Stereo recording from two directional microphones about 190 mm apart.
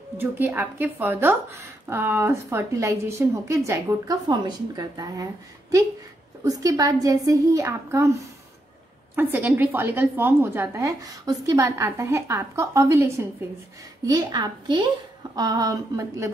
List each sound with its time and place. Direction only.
0.2 s a woman's voice: 10° right (ahead or behind)